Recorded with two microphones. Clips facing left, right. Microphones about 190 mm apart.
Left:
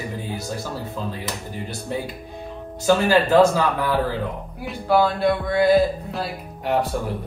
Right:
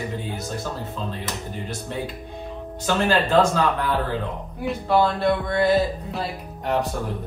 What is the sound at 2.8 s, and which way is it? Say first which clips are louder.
A woman's voice: left 4 dB; 10° left (ahead or behind).